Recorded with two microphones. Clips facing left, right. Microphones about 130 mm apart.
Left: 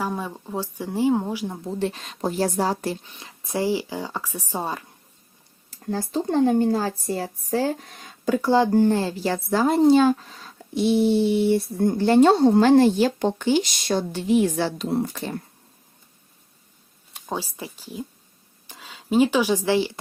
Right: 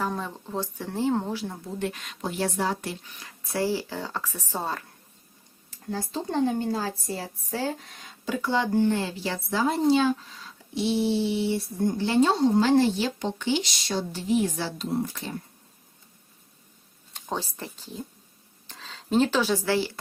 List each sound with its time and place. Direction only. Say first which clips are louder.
0.0 s speech: left 2 dB; 10° left (ahead or behind)
1.6 s speech: left 5 dB; 30° left (ahead or behind)
3.1 s speech: left 4 dB; 25° left (ahead or behind)
5.9 s a woman's voice: left 6 dB; 50° left (ahead or behind)
17.2 s speech: left 2 dB; 10° left (ahead or behind)